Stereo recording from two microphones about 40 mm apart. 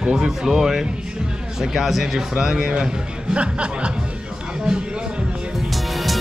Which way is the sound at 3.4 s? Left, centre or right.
Right.